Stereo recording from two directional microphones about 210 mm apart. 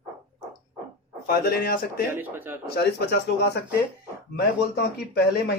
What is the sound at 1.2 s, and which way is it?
Speech, 45° left (ahead or behind).